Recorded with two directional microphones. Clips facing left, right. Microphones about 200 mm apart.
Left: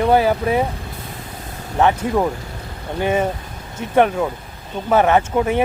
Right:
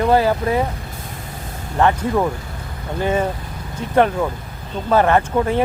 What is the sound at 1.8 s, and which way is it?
Speech, 10° left (ahead or behind).